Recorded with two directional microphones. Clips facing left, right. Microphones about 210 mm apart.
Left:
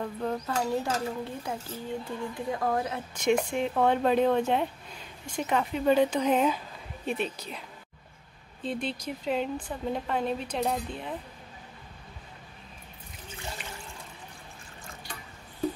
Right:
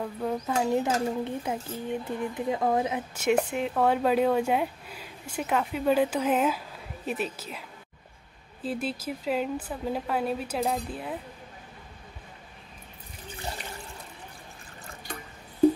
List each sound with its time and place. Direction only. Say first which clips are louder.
0.0 s speech: right 1 dB; 5° right (ahead or behind)
0.6 s speech: right 5 dB; 15° right (ahead or behind)
3.2 s speech: even; 5° right (ahead or behind)
8.6 s speech: right 1 dB; 5° right (ahead or behind)